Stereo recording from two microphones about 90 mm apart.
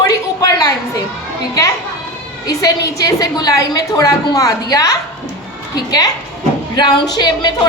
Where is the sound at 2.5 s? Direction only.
45° left (ahead or behind).